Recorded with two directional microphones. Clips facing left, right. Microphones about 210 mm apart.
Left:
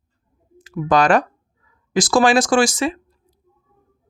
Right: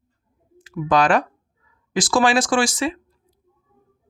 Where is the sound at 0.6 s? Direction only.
40° left (ahead or behind).